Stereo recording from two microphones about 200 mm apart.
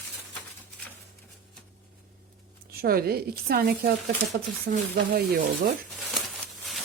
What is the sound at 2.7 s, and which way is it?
A woman's voice, 50° right (ahead or behind).